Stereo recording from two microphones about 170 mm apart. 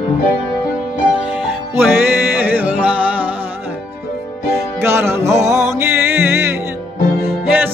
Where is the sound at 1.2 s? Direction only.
10° right (ahead or behind).